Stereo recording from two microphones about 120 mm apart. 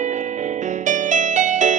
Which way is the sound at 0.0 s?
85° right.